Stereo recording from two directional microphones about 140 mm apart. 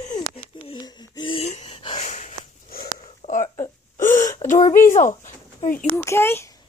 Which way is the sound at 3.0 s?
55° left (ahead or behind).